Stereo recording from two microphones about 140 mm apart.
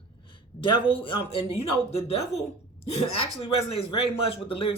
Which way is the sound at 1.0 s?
45° left (ahead or behind).